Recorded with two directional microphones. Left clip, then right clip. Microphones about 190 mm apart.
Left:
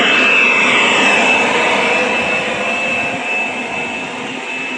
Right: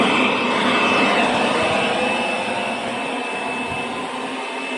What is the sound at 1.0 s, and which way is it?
Vehicle, 45° left (ahead or behind).